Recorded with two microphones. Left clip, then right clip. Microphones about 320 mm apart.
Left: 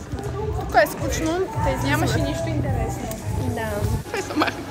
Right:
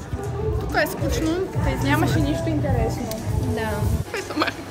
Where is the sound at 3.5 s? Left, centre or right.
Centre.